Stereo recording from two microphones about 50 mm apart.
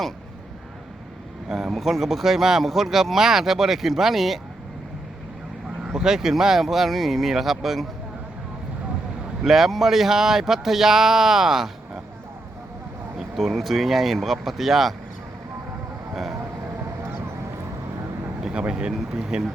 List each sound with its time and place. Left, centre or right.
1.5 s speech: centre
5.9 s speech: centre
9.4 s speech: centre
13.1 s speech: centre
18.7 s speech: centre